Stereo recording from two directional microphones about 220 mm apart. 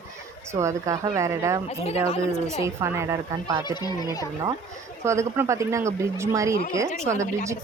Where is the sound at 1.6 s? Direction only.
30° left (ahead or behind).